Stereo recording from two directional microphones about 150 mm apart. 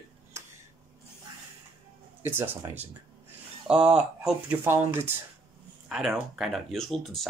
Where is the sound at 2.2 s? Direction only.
15° right (ahead or behind).